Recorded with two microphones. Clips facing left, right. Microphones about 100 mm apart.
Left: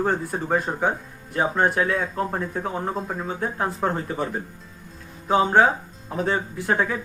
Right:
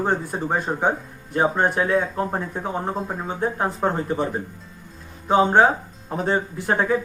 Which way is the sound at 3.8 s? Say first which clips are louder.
Right 2 dB; 15° right (ahead or behind).